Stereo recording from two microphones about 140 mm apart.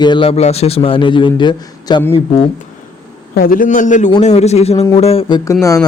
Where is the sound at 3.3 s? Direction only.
85° left; by 4.1 s 65° left (ahead or behind).